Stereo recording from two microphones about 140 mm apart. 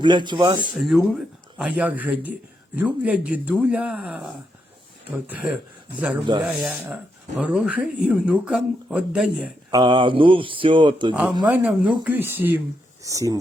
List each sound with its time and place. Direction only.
0.0 s speech: 35° right (ahead or behind)
0.8 s speech: centre (ahead or behind)
9.7 s speech: 35° right (ahead or behind)
11.1 s speech: 5° right (ahead or behind); by 13.4 s 25° right (ahead or behind)